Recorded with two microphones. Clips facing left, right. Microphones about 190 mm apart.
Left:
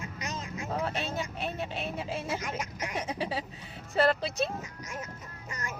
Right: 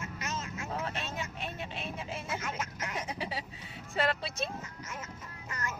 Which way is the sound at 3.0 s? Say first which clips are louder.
Left 6 dB; 30° left (ahead or behind).